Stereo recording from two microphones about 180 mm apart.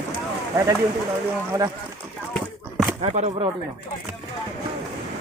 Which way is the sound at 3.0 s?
40° right (ahead or behind).